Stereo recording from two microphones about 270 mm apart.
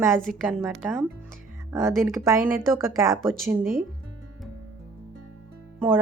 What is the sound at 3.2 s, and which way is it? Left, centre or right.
Speech, centre.